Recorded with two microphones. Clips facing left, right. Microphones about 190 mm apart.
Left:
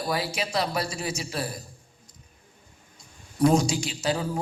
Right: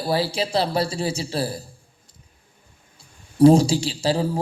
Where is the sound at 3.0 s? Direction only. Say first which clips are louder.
Right 8 dB; 30° right (ahead or behind).